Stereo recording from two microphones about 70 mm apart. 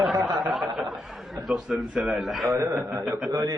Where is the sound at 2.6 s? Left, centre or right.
Right.